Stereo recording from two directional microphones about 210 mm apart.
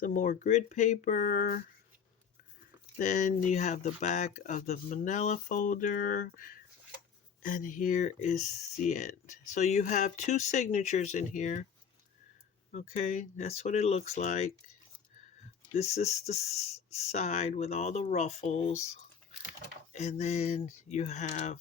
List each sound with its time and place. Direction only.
0.0 s speech: 40° left (ahead or behind)
3.0 s speech: 35° left (ahead or behind)
12.7 s speech: 35° left (ahead or behind)
15.7 s speech: 30° left (ahead or behind)